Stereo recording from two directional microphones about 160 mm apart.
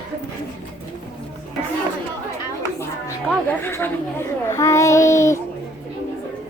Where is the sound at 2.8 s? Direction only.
15° left (ahead or behind).